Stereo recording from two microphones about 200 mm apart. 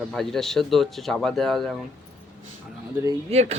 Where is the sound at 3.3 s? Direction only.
35° right (ahead or behind).